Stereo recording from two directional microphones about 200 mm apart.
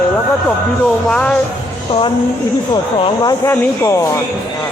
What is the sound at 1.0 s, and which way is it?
Speech, 5° left (ahead or behind).